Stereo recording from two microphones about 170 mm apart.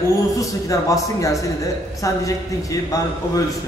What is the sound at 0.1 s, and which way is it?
A man's voice, 20° left (ahead or behind).